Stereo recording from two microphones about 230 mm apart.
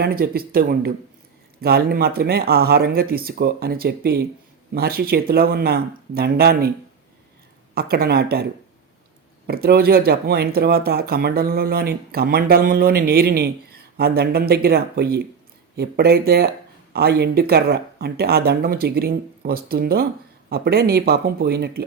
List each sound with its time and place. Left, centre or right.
0.0 s speech: right
7.8 s speech: right
9.5 s speech: right